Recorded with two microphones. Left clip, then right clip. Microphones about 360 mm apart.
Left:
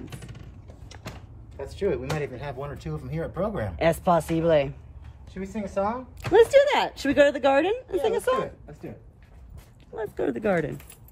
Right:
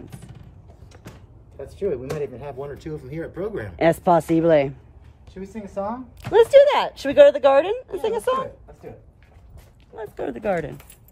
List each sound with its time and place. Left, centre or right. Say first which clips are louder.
1.7 s speech: right 1 dB; left
2.8 s speech: right 2 dB; centre
3.7 s speech: right 5 dB; right
6.3 s a woman's voice: right 4 dB; centre
9.9 s speech: left 2 dB; centre